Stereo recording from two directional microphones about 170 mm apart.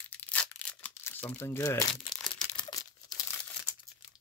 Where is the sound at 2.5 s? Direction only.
25° left (ahead or behind).